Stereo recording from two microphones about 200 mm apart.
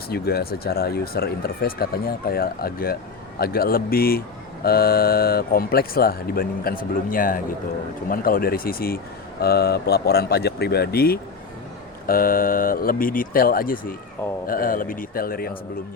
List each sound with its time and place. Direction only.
0.1 s speech: 50° left (ahead or behind)